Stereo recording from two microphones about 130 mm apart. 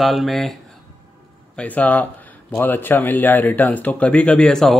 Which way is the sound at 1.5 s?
10° left (ahead or behind).